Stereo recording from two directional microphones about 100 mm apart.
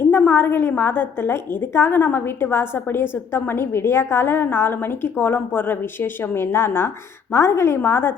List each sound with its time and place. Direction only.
0.1 s a woman's voice: 20° left (ahead or behind)